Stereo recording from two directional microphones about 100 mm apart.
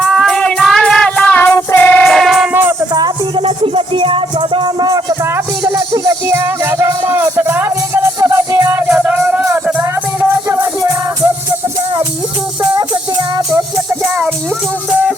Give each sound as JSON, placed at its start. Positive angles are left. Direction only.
{"t": 0.0, "sound": "music", "side_deg": 5}
{"t": 2.0, "sound": "music", "side_deg": 0}
{"t": 2.5, "sound": "music", "side_deg": -20}
{"t": 3.4, "sound": "music", "side_deg": -65}
{"t": 6.2, "sound": "music", "side_deg": -25}
{"t": 9.0, "sound": "music", "side_deg": -20}